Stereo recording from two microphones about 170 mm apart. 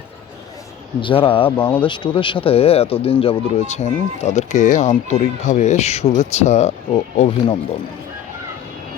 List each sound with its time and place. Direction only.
1.0 s speech: 30° left (ahead or behind)
1.5 s speech: 10° left (ahead or behind)
1.9 s speech: 30° left (ahead or behind)